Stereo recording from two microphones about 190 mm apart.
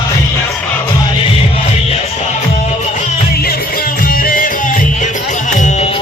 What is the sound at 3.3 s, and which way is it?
Music, 55° left (ahead or behind).